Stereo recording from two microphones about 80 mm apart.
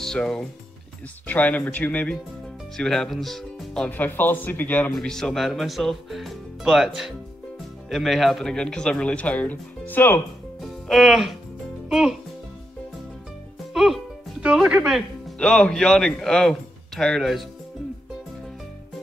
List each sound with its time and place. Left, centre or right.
0.0 s speech: centre
1.2 s speech: left
2.8 s speech: centre
3.9 s speech: left
4.9 s speech: centre; by 10.2 s left
10.6 s music: centre
11.9 s speech: centre
13.7 s speech: centre
15.3 s speech: centre